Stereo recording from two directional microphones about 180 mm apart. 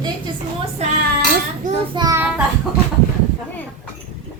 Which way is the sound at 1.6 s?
45° right (ahead or behind).